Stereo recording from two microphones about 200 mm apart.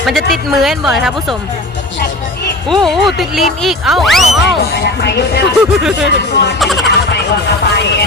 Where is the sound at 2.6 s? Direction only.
Centre (ahead or behind).